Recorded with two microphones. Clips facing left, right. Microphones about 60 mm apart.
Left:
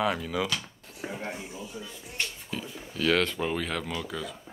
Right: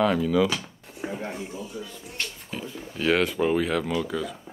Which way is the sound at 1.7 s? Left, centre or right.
Left.